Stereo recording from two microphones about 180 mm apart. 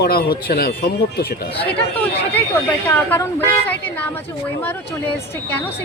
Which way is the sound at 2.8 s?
10° left (ahead or behind).